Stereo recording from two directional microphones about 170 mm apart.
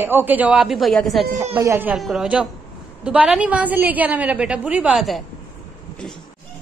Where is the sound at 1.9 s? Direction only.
Centre (ahead or behind).